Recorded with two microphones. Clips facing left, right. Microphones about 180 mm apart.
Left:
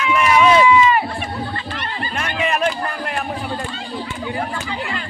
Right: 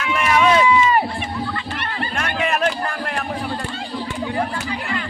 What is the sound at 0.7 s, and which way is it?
Run, 40° right (ahead or behind).